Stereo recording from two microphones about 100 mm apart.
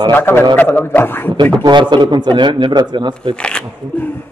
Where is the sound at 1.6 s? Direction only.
50° right (ahead or behind).